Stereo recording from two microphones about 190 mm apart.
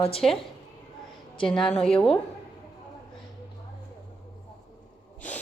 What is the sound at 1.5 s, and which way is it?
Speech, 5° left (ahead or behind).